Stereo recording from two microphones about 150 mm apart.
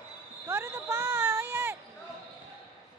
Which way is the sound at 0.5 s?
20° right (ahead or behind).